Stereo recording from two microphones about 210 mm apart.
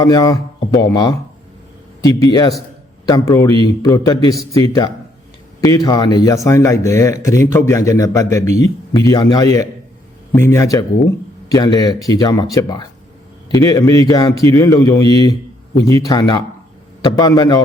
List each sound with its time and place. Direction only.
0.0 s speech: 15° left (ahead or behind)
2.2 s speech: 20° left (ahead or behind)